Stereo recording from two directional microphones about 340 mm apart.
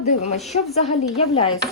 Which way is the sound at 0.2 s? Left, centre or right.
Centre.